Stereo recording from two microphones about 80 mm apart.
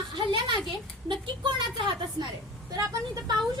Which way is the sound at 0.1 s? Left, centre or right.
Right.